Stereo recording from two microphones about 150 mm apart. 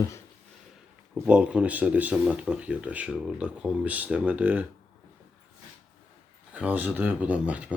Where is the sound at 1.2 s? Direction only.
10° right (ahead or behind).